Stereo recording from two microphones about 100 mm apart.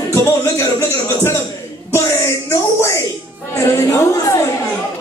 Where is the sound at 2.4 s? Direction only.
30° left (ahead or behind).